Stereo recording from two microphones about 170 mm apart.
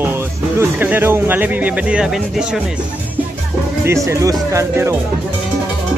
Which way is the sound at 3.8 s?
15° right (ahead or behind).